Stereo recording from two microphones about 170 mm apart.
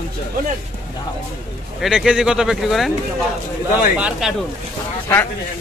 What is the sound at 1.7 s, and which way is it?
Speech, 5° right (ahead or behind).